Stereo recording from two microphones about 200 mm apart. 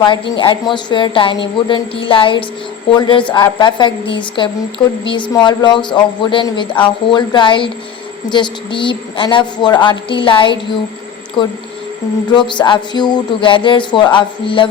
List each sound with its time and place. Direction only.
0.0 s speech: 25° left (ahead or behind)